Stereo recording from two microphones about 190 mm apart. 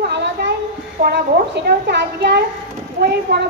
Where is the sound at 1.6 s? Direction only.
60° right (ahead or behind).